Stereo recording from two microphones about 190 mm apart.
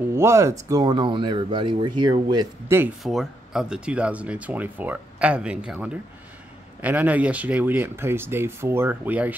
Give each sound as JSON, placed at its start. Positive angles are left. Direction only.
{"t": 0.1, "sound": "speech", "side_deg": -15}
{"t": 2.8, "sound": "speech", "side_deg": 0}